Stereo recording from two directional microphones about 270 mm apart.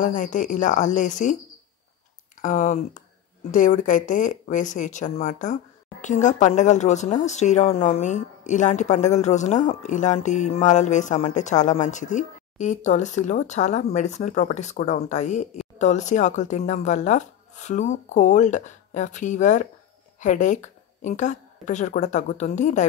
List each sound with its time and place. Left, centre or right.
0.0 s speech: left
2.4 s speech: left